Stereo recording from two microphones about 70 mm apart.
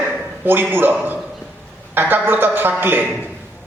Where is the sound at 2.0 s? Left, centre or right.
Right.